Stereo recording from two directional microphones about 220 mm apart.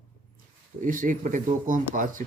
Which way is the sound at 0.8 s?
40° right (ahead or behind).